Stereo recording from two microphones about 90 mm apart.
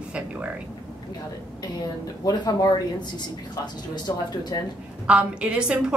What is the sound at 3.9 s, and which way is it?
Speech, 50° left (ahead or behind).